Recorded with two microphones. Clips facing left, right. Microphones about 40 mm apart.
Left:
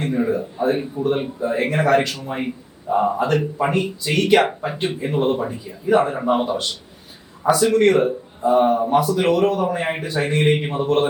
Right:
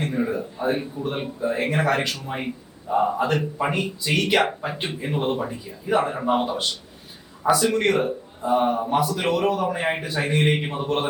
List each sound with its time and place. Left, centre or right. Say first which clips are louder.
0.0 s a man's voice: left 4 dB; centre